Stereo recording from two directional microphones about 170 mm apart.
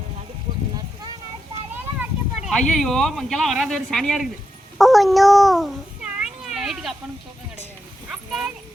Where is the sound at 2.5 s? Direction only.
5° left (ahead or behind).